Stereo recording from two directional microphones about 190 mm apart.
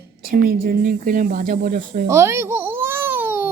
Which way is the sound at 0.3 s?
50° right (ahead or behind).